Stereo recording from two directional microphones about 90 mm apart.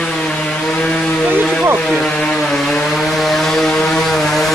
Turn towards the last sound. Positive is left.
turn(degrees=5)  # may be behind; listen again after turning